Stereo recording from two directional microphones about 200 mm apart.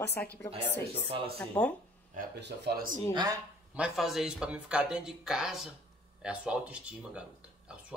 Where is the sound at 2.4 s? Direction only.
55° right (ahead or behind).